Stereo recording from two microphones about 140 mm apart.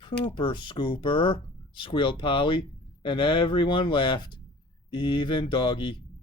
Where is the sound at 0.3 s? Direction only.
35° left (ahead or behind).